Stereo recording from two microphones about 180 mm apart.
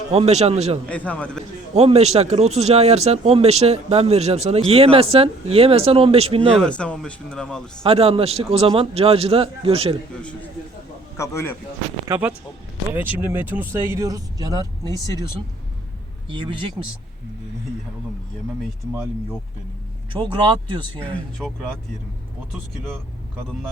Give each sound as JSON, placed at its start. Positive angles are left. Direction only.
{"t": 0.1, "sound": "speech", "side_deg": -35}
{"t": 0.9, "sound": "a man's voice", "side_deg": 10}
{"t": 1.7, "sound": "speech", "side_deg": -35}
{"t": 6.7, "sound": "speech", "side_deg": 5}
{"t": 7.9, "sound": "speech", "side_deg": -30}
{"t": 11.2, "sound": "a man's voice", "side_deg": 15}
{"t": 13.1, "sound": "speech", "side_deg": -10}
{"t": 14.8, "sound": "speech", "side_deg": 20}
{"t": 16.3, "sound": "speech", "side_deg": -25}
{"t": 20.1, "sound": "speech", "side_deg": -25}
{"t": 21.0, "sound": "speech", "side_deg": 0}